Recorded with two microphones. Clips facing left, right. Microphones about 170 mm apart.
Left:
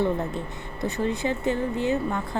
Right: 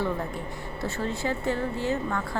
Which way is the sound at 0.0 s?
20° left (ahead or behind).